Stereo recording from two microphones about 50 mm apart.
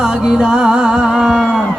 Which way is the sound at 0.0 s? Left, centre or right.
Centre.